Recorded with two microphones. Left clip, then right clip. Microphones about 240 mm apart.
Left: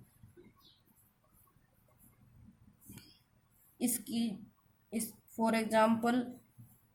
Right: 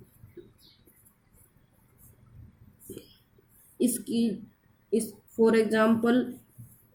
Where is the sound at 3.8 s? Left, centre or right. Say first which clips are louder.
Right 9 dB; left.